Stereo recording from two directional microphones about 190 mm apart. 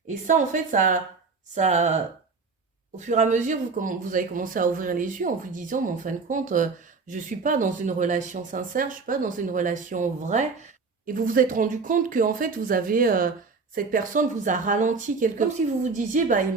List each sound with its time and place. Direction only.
0.1 s speech: 40° right (ahead or behind)
3.0 s speech: 40° right (ahead or behind)